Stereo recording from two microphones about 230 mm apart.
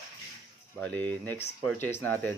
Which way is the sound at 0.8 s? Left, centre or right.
Centre.